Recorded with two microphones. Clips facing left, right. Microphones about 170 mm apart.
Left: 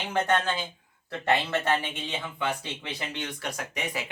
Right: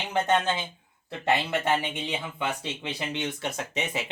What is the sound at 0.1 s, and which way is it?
Speech, 20° right (ahead or behind).